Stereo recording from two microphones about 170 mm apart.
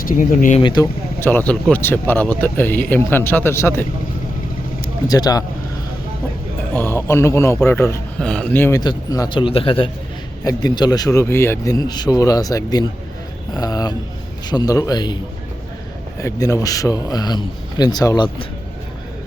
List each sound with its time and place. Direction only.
0.0 s speech: 50° left (ahead or behind)
0.6 s speech: 25° left (ahead or behind)
1.2 s speech: 10° left (ahead or behind)
5.0 s speech: 20° left (ahead or behind)
6.7 s speech: 15° left (ahead or behind)
8.8 s speech: 25° left (ahead or behind)
16.2 s speech: 20° left (ahead or behind)